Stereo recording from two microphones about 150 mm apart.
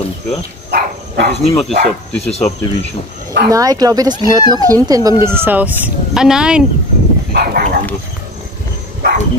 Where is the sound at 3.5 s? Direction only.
25° right (ahead or behind).